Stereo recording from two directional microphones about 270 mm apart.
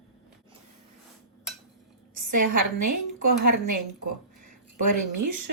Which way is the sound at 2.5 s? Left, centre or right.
Right.